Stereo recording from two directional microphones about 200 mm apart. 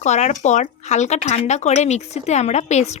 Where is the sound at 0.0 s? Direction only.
35° left (ahead or behind).